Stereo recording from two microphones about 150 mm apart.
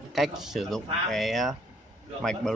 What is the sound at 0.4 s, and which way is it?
Speech, centre (ahead or behind).